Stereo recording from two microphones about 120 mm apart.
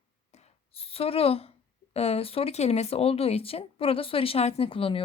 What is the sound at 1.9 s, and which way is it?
Speech, 60° left (ahead or behind).